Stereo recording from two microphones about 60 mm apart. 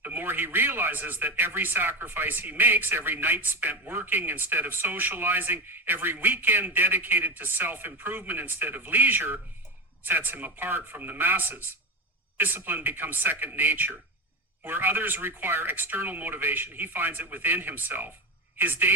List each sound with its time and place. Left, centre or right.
0.0 s a woman's voice: right